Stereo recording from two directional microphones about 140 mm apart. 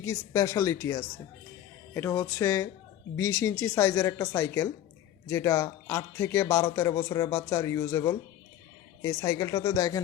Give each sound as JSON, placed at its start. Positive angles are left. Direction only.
{"t": 0.0, "sound": "speech", "side_deg": 20}